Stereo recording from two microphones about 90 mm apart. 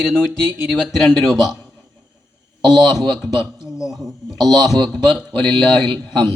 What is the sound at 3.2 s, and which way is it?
Speech, 5° right (ahead or behind).